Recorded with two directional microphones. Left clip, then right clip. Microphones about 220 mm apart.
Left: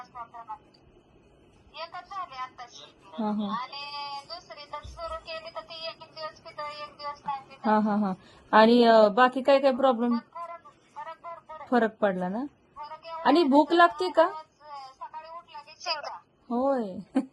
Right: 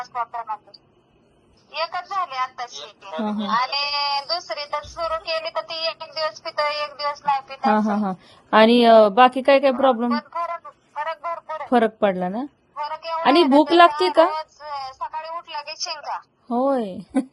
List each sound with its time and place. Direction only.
0.0 s speech: 50° right (ahead or behind)
1.7 s speech: 50° right (ahead or behind)
7.6 s a woman's voice: 10° right (ahead or behind)
10.1 s a sound: 45° right (ahead or behind)
11.7 s a woman's voice: 10° right (ahead or behind)
12.7 s a sound: 45° right (ahead or behind)
13.5 s a woman's voice: 10° right (ahead or behind)
14.3 s a sound: 50° right (ahead or behind)
15.8 s a woman's voice: centre (ahead or behind)
16.5 s a woman's voice: 15° right (ahead or behind)